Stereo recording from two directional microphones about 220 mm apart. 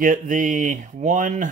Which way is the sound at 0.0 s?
35° right (ahead or behind).